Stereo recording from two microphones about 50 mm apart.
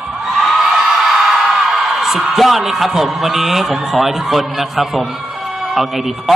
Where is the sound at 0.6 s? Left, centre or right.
Centre.